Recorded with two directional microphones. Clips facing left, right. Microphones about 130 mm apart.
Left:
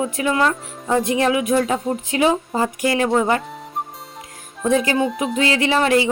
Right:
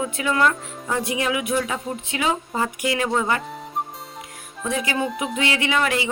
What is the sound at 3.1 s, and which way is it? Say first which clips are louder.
Speech: left 5 dB; 20° left (ahead or behind).